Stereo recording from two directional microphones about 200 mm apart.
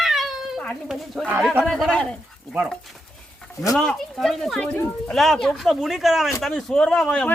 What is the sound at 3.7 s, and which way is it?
Speech, centre (ahead or behind).